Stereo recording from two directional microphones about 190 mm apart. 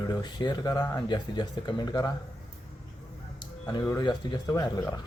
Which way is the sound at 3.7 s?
20° left (ahead or behind).